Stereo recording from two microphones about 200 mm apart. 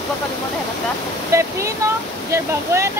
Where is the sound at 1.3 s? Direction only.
15° right (ahead or behind).